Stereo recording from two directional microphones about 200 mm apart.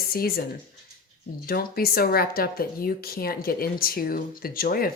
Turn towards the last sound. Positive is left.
turn(degrees=45)  # may be behind; listen again after turning